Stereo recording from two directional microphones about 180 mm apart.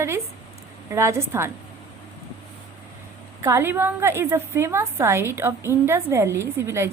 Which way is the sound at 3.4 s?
15° right (ahead or behind).